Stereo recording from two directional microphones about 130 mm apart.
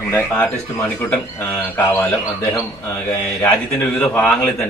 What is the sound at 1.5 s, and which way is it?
Speech, 15° left (ahead or behind).